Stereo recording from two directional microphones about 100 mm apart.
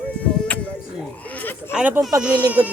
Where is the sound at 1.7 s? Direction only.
10° right (ahead or behind).